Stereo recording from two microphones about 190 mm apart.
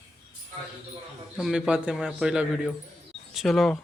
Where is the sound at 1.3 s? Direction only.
5° right (ahead or behind).